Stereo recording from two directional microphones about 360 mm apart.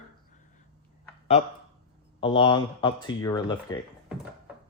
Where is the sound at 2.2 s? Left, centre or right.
Centre.